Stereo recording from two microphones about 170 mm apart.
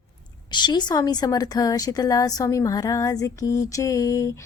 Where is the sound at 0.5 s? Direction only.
25° left (ahead or behind).